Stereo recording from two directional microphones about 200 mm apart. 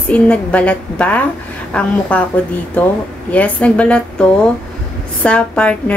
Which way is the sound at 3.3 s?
5° left (ahead or behind).